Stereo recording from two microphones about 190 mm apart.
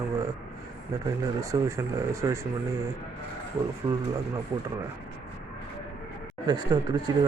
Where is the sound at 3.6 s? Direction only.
15° right (ahead or behind).